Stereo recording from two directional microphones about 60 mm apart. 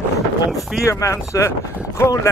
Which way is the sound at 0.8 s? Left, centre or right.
Left.